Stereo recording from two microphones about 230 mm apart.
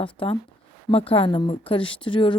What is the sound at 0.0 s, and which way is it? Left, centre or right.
Speech, left.